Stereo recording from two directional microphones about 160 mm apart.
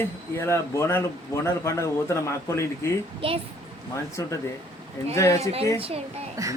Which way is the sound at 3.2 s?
35° right (ahead or behind).